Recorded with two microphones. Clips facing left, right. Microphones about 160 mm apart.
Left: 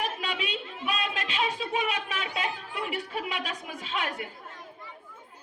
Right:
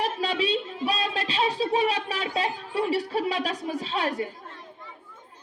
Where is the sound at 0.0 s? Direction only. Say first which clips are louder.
Right 6 dB; 35° right (ahead or behind).